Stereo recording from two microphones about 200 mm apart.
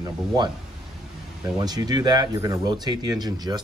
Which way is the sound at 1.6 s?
20° right (ahead or behind).